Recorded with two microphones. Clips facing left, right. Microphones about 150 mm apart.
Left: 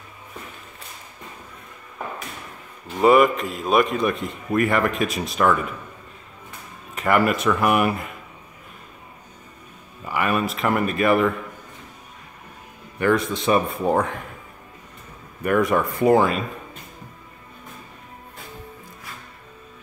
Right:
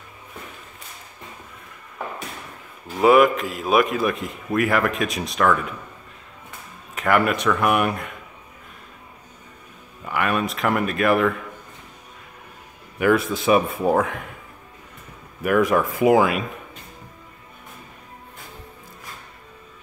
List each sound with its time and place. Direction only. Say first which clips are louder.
3.0 s a man's voice: right 1 dB; centre (ahead or behind)
7.0 s a man's voice: even; centre (ahead or behind)
10.0 s a man's voice: even; centre (ahead or behind)
13.0 s a man's voice: right 1 dB; 5° right (ahead or behind)
15.4 s a man's voice: right 1 dB; centre (ahead or behind)